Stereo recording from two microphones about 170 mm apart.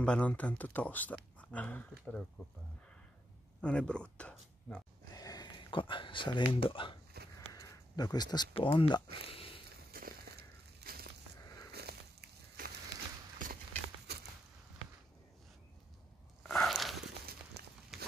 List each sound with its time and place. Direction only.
0.0 s speech: 5° left (ahead or behind)
3.6 s speech: 5° left (ahead or behind)
5.1 s speech: 20° left (ahead or behind)
9.3 s a sound: 35° left (ahead or behind)
9.8 s crushing: 65° right (ahead or behind)
11.7 s a sound: 70° right (ahead or behind)
16.4 s biting: centre (ahead or behind)
17.9 s walk: centre (ahead or behind)